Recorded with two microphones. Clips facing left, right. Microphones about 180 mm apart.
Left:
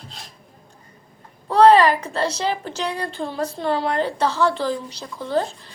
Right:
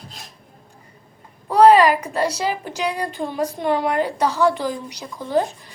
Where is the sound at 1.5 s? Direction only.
10° right (ahead or behind).